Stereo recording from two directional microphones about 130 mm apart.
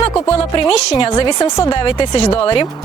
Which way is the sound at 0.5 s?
35° left (ahead or behind).